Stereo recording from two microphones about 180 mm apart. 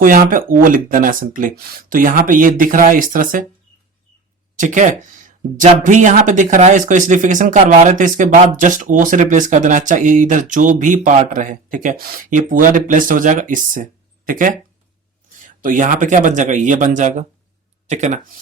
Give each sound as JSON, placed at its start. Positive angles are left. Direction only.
{"t": 0.0, "sound": "speech", "side_deg": -50}
{"t": 4.5, "sound": "speech", "side_deg": -45}
{"t": 15.6, "sound": "speech", "side_deg": -45}